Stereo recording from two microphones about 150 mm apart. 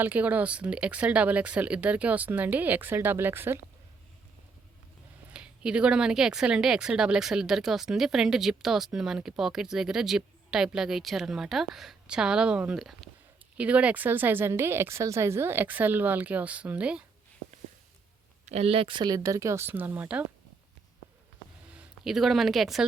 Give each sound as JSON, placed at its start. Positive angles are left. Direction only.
{"t": 0.0, "sound": "speech", "side_deg": -10}
{"t": 5.3, "sound": "speech", "side_deg": -5}
{"t": 18.4, "sound": "speech", "side_deg": -45}
{"t": 21.7, "sound": "speech", "side_deg": -5}